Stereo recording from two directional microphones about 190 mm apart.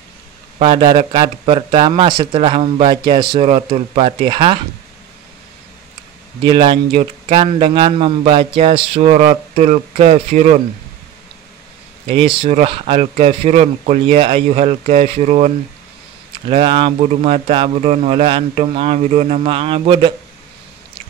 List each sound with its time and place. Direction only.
0.6 s speech: 25° right (ahead or behind)
6.4 s a man's voice: 25° right (ahead or behind)
12.1 s a man's voice: 30° right (ahead or behind)